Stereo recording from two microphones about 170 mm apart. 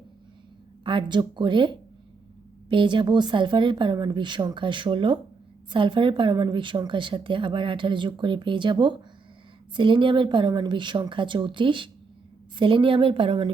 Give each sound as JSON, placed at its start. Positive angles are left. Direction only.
{"t": 0.9, "sound": "a woman's voice", "side_deg": -30}